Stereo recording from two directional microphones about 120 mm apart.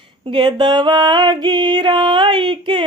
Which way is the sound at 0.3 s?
40° right (ahead or behind).